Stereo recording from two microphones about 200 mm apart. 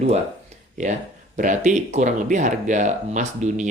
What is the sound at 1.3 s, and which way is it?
Speech, 40° right (ahead or behind).